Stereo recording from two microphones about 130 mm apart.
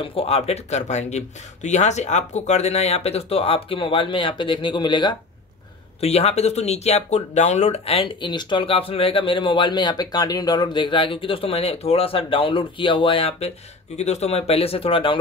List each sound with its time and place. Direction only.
0.0 s speech: 45° left (ahead or behind)
5.9 s speech: 50° left (ahead or behind)
13.9 s speech: 55° left (ahead or behind)